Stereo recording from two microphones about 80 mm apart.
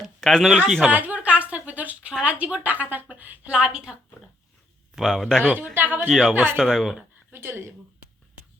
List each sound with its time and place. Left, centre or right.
0.0 s a sound: centre
0.9 s a sound: right
2.2 s a woman's voice: centre
4.9 s speech: centre
5.5 s speech: right
6.1 s speech: centre
6.3 s speech: right
6.6 s speech: centre
7.3 s speech: right